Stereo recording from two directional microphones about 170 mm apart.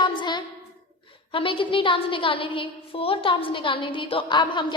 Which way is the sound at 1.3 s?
30° left (ahead or behind).